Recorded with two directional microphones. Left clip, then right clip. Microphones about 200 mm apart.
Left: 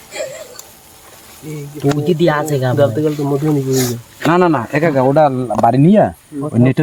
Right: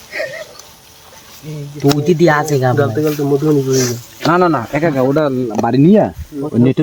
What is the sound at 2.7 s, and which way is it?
Speech, 15° left (ahead or behind).